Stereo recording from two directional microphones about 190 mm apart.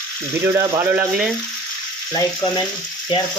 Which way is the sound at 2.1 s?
15° left (ahead or behind).